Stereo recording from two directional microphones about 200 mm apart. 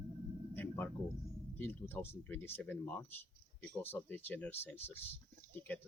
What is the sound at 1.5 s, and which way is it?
Speech, 10° left (ahead or behind).